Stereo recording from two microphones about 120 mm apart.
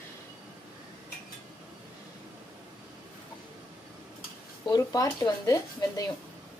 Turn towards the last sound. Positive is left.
turn(degrees=30)  # may be behind; listen again after turning